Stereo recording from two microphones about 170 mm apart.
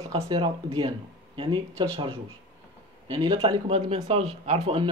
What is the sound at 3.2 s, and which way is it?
Speech, 35° right (ahead or behind).